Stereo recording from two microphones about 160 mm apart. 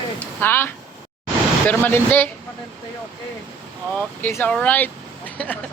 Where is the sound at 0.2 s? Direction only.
10° left (ahead or behind).